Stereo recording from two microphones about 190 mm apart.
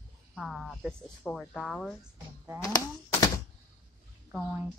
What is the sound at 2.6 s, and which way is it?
Typewriter, 20° left (ahead or behind).